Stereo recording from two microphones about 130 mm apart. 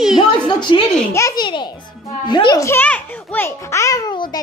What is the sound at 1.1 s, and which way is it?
Speech, 20° left (ahead or behind).